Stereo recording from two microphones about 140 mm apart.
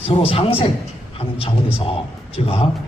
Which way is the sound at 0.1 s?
40° left (ahead or behind).